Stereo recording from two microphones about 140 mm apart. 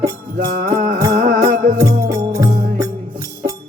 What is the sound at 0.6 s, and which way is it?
Music, 85° right.